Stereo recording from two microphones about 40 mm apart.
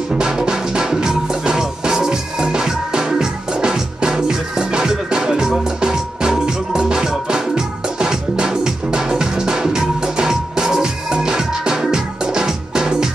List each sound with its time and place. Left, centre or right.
0.1 s music: centre